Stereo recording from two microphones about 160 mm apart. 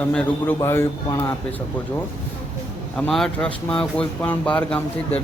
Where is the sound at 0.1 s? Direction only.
5° left (ahead or behind).